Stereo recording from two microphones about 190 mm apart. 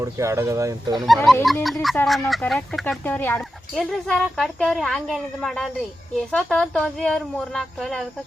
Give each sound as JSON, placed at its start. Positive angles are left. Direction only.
{"t": 0.0, "sound": "speech", "side_deg": -15}
{"t": 0.9, "sound": "speech", "side_deg": 0}